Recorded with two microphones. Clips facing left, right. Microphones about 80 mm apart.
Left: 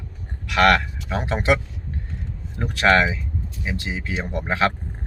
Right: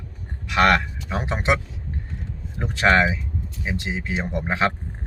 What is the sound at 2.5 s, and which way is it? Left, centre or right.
A man's voice, right.